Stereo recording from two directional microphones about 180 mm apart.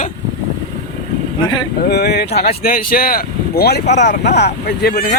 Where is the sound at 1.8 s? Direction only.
60° left (ahead or behind).